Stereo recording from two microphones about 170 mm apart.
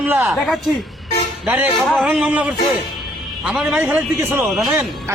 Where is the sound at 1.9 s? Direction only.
Centre (ahead or behind).